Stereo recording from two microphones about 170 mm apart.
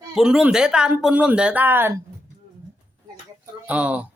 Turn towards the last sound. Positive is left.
turn(degrees=-10)  # may be behind; listen again after turning